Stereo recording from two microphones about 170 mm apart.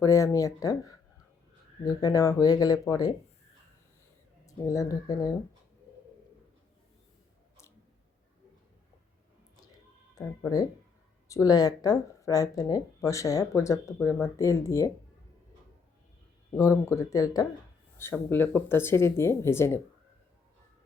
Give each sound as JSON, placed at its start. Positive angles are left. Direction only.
{"t": 0.0, "sound": "speech", "side_deg": 20}
{"t": 4.4, "sound": "speech", "side_deg": 20}
{"t": 10.2, "sound": "speech", "side_deg": 20}
{"t": 16.6, "sound": "speech", "side_deg": 20}